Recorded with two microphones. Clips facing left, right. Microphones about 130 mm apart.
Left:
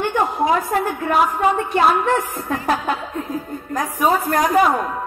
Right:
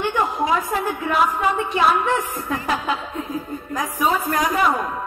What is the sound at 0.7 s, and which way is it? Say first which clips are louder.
A man's voice: left 3 dB; 55° left (ahead or behind).